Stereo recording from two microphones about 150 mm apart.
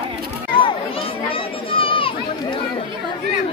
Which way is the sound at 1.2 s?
35° left (ahead or behind).